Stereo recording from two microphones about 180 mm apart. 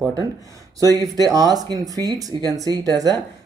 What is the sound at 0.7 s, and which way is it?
Speech, 20° right (ahead or behind).